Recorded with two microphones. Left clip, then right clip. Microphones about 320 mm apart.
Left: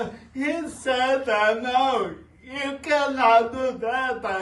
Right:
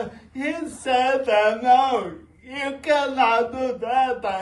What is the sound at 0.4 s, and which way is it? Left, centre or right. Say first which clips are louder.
A woman's voice: left 1 dB; centre.